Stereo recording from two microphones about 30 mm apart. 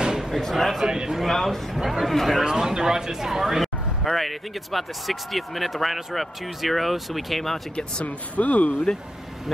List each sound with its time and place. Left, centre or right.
0.3 s speech: centre
0.8 s a man's voice: right
1.1 s speech: centre
2.4 s speech: centre
7.7 s speech: left